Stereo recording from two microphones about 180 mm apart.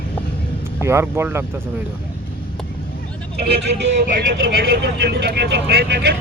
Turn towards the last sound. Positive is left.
turn(degrees=-65)  # may be behind; listen again after turning